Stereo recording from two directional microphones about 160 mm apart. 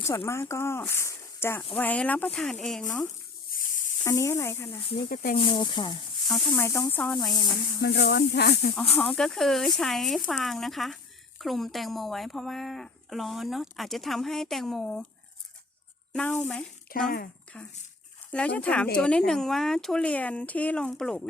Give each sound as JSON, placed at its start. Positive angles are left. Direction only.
{"t": 0.0, "sound": "speech", "side_deg": 15}
{"t": 3.5, "sound": "a sound", "side_deg": 55}
{"t": 4.0, "sound": "speech", "side_deg": 15}
{"t": 5.0, "sound": "speech", "side_deg": 65}
{"t": 5.4, "sound": "speech", "side_deg": 30}
{"t": 6.2, "sound": "speech", "side_deg": 5}
{"t": 7.8, "sound": "speech", "side_deg": 90}
{"t": 8.9, "sound": "speech", "side_deg": 5}
{"t": 16.1, "sound": "speech", "side_deg": 5}
{"t": 16.9, "sound": "speech", "side_deg": 65}
{"t": 17.5, "sound": "speech", "side_deg": 10}